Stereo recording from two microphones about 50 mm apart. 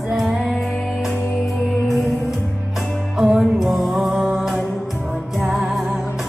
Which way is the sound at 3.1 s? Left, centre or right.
Centre.